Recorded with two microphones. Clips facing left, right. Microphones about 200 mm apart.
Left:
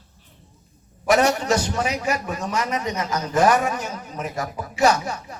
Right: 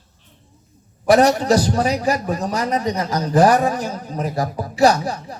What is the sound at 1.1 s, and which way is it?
A man's voice, 35° right (ahead or behind).